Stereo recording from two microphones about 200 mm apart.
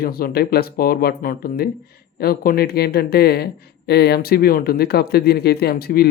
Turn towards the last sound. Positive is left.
turn(degrees=50)  # may be behind; listen again after turning